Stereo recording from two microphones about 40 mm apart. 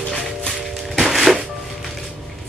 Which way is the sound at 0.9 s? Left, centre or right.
Centre.